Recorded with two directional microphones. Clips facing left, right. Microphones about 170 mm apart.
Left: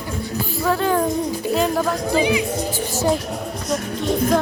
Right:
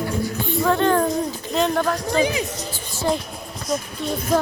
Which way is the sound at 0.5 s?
5° left (ahead or behind).